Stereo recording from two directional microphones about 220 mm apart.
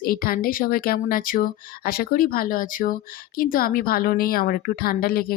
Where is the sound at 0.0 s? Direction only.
40° left (ahead or behind).